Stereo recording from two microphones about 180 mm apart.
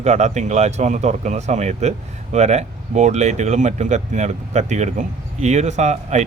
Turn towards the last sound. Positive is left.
turn(degrees=-40)  # may be behind; listen again after turning